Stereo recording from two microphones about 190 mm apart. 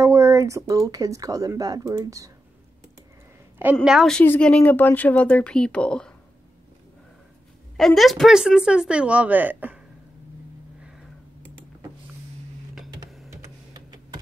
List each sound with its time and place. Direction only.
0.0 s speech: 15° right (ahead or behind)
3.7 s speech: centre (ahead or behind)
7.7 s speech: centre (ahead or behind)
12.7 s printer: centre (ahead or behind)
13.7 s a sound: 20° right (ahead or behind)